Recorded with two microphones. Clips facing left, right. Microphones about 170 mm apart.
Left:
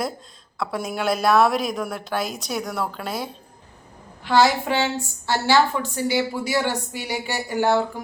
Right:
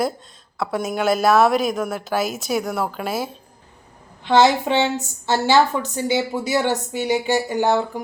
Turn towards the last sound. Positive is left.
turn(degrees=-20)  # may be behind; listen again after turning